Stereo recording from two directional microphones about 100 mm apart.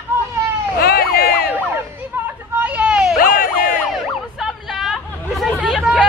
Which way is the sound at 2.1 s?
20° right (ahead or behind).